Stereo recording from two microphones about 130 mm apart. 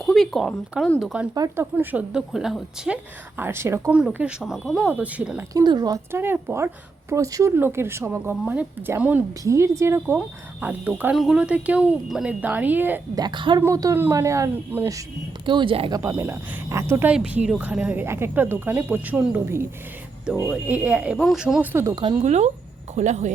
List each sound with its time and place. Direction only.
0.0 s a sound: centre (ahead or behind)
0.9 s speech: 5° right (ahead or behind)
1.3 s speech: 25° right (ahead or behind)
1.7 s speech: 15° right (ahead or behind)
3.3 s speech: 15° right (ahead or behind)
3.9 s speech: 10° right (ahead or behind)
5.5 s speech: 30° right (ahead or behind)
6.1 s speech: 15° right (ahead or behind)
13.1 s speech: 35° right (ahead or behind)
13.6 s speech: 25° right (ahead or behind)
15.4 s speech: 40° right (ahead or behind)
16.0 s speech: 20° right (ahead or behind)
22.2 s speech: 60° right (ahead or behind)